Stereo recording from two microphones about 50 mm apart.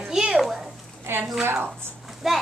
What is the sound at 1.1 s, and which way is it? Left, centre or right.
Speech, right.